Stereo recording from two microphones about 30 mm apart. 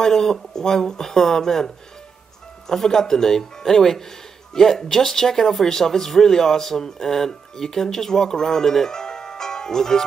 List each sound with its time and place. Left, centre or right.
0.0 s speech: centre
2.7 s speech: centre